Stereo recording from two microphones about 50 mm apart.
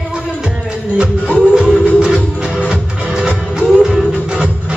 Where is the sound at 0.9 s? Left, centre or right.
Right.